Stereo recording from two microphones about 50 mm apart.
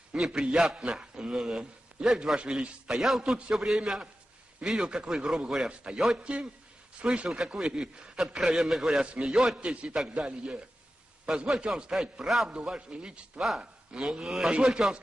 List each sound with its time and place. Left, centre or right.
0.1 s a man's voice: centre